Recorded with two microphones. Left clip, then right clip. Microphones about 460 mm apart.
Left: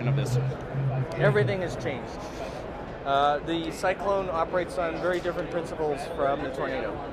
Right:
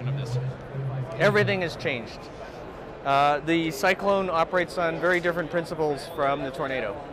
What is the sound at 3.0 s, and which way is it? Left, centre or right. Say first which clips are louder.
Speech: right 2 dB; right.